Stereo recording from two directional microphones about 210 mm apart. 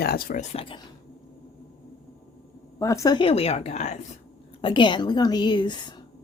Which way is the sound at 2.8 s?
15° left (ahead or behind).